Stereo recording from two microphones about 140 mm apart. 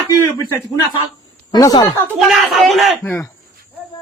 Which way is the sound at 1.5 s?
25° left (ahead or behind).